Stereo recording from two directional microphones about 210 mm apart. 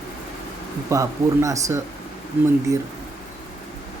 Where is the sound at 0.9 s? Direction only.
15° right (ahead or behind).